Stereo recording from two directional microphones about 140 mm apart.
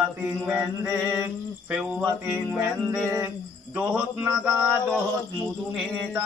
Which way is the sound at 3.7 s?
5° right (ahead or behind).